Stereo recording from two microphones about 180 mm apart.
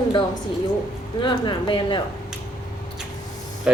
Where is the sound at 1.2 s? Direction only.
25° left (ahead or behind).